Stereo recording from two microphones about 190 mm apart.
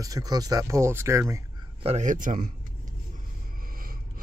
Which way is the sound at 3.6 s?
50° right (ahead or behind).